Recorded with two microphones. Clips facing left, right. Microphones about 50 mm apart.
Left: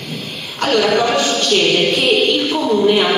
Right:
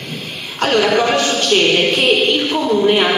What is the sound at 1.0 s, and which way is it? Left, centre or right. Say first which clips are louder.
Speech: even; centre.